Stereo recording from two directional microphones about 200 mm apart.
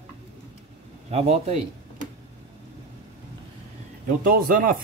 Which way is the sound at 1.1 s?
30° right (ahead or behind).